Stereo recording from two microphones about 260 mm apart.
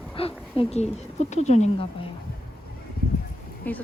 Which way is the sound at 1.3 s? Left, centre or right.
Left.